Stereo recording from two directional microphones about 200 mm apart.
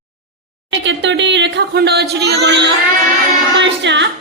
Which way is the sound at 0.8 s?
65° right (ahead or behind).